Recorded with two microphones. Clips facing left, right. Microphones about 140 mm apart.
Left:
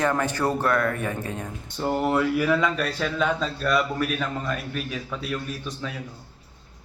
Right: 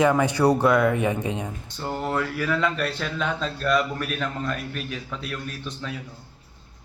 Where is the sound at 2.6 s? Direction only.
Centre (ahead or behind).